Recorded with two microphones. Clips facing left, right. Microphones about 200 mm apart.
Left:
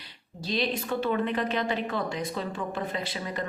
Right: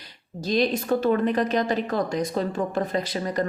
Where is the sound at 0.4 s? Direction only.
45° right (ahead or behind).